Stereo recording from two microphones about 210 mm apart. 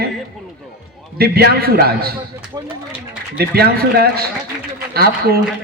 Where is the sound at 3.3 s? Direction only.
50° right (ahead or behind).